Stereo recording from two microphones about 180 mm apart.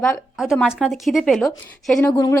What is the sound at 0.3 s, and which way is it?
A woman's voice, 5° right (ahead or behind).